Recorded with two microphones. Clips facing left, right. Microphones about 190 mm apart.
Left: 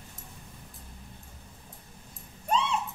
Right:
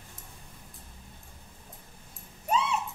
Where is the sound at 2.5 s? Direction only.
5° right (ahead or behind).